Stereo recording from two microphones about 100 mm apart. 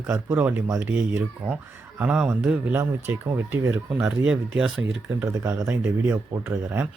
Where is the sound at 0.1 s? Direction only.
25° right (ahead or behind).